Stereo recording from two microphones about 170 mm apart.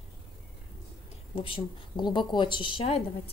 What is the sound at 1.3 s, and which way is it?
A woman's voice, 30° left (ahead or behind).